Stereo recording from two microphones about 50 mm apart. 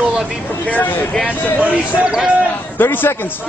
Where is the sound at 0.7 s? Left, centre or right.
Left.